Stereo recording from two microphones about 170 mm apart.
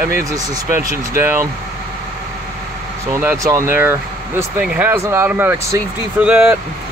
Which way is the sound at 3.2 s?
15° right (ahead or behind).